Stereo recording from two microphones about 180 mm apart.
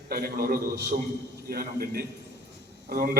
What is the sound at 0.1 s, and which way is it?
A man's voice, 55° right (ahead or behind).